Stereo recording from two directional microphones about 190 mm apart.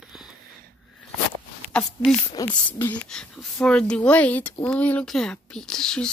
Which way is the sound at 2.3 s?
25° left (ahead or behind).